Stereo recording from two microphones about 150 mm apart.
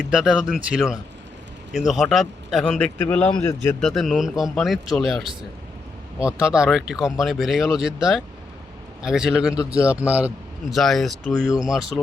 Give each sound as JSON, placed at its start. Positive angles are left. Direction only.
{"t": 0.0, "sound": "a man's voice", "side_deg": -5}
{"t": 10.8, "sound": "speech", "side_deg": 0}